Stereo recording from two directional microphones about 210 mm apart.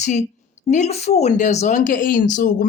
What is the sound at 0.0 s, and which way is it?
A woman's voice, 35° left (ahead or behind).